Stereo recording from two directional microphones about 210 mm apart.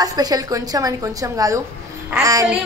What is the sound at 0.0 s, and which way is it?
A woman's voice, 15° right (ahead or behind).